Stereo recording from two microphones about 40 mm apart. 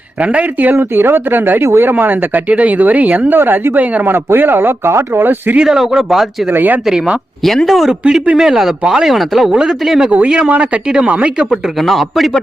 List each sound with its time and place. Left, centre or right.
0.2 s speech: right
0.8 s speech: right
2.5 s speech: right
3.3 s speech: right
5.6 s speech: centre
6.5 s speech: right
7.4 s a man's voice: centre
7.9 s speech: right
8.4 s a man's voice: centre
10.2 s speech: right
11.0 s speech: right
11.5 s a man's voice: centre